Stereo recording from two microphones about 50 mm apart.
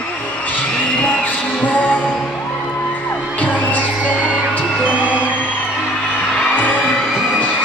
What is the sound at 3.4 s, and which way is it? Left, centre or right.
Music, left.